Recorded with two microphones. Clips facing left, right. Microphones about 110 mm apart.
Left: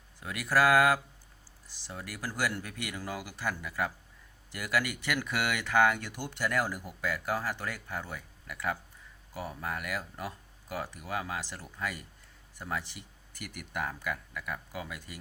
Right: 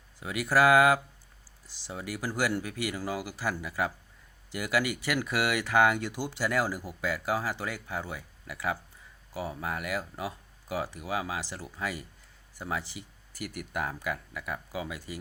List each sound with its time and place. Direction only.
0.2 s speech: 10° right (ahead or behind)